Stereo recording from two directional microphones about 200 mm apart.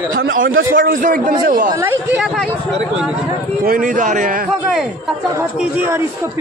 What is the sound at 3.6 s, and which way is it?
Speech, 45° right (ahead or behind).